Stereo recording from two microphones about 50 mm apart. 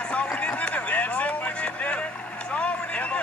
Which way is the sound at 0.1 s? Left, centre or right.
Left.